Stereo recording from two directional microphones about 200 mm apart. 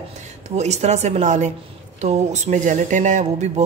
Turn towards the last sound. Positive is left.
turn(degrees=-40)  # may be behind; listen again after turning